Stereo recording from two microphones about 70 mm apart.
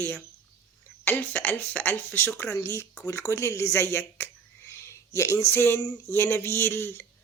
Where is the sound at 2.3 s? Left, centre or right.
Left.